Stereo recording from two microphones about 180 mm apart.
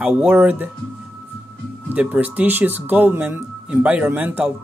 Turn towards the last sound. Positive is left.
turn(degrees=-10)  # may be behind; listen again after turning